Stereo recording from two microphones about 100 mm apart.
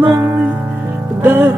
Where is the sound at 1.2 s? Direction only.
20° right (ahead or behind).